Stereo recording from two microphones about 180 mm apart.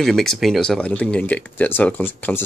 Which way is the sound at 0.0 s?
Centre (ahead or behind).